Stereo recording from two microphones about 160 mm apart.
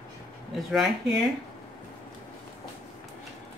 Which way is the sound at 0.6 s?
Centre (ahead or behind).